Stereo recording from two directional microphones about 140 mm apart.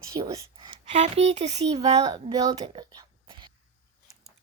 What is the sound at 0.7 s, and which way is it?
Speech, 50° right (ahead or behind).